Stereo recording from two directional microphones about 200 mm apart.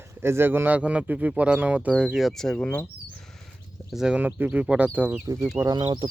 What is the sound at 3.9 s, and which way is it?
Speech, 5° right (ahead or behind).